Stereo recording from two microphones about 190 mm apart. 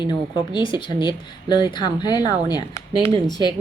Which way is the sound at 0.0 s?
25° left (ahead or behind).